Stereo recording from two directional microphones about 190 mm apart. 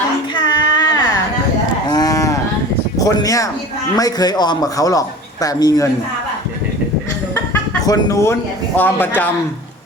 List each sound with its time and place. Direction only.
0.3 s child singing: 25° left (ahead or behind)
1.9 s cattle: 20° left (ahead or behind)
3.0 s a man's voice: 20° left (ahead or behind)
7.3 s speech: 15° left (ahead or behind)